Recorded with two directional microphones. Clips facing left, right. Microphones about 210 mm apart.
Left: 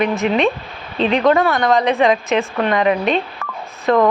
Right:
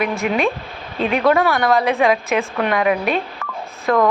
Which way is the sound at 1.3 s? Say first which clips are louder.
Right 1 dB; 10° right (ahead or behind).